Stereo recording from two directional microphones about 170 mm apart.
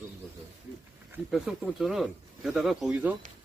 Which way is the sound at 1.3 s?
Centre (ahead or behind).